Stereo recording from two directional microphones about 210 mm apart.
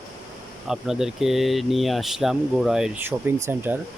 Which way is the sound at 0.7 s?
Centre (ahead or behind).